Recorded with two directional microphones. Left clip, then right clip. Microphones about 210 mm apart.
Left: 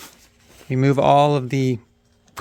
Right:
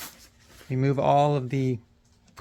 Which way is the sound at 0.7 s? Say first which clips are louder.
Left 7 dB; 50° left (ahead or behind).